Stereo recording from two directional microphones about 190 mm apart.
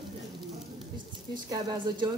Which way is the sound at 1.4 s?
20° right (ahead or behind).